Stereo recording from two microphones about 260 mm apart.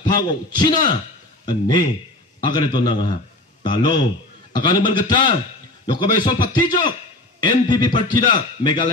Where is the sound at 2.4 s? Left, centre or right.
Centre.